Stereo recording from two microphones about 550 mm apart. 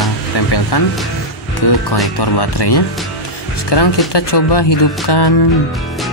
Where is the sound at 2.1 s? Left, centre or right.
Left.